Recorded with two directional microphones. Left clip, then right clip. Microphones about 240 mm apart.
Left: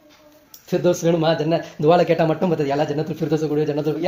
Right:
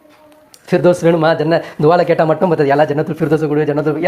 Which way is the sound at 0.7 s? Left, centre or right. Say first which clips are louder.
Right 7 dB; centre.